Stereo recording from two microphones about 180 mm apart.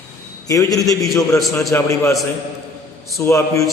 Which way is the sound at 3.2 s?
15° left (ahead or behind).